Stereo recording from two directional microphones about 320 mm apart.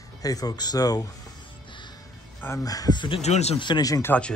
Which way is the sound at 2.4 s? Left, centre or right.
Centre.